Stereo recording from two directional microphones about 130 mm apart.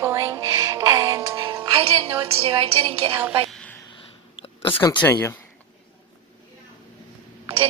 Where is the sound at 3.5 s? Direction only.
10° left (ahead or behind).